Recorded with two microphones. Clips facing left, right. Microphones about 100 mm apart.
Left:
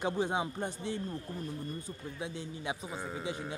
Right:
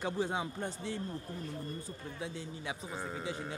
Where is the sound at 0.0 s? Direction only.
20° left (ahead or behind).